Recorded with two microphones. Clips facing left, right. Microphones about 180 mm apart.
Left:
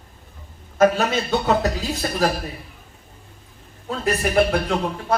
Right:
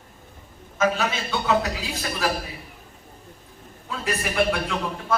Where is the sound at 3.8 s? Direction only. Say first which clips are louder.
Left 6 dB; 45° left (ahead or behind).